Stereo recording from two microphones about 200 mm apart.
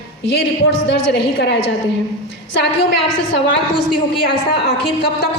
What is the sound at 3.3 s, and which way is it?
A woman's voice, 55° left (ahead or behind).